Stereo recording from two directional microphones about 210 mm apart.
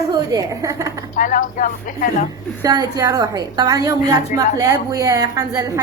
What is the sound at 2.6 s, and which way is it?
A woman's voice, 15° right (ahead or behind).